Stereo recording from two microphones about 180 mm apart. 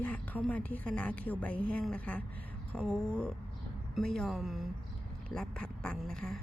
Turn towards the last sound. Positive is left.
turn(degrees=0)  # may be behind; listen again after turning